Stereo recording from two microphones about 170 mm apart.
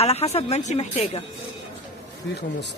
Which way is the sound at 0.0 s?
35° left (ahead or behind).